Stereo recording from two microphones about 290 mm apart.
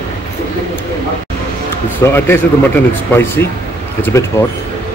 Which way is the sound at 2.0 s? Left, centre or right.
Centre.